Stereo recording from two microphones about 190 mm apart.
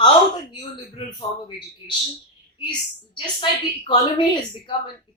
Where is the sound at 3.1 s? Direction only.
25° left (ahead or behind).